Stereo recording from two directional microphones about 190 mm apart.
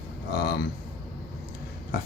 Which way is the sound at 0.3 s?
55° left (ahead or behind).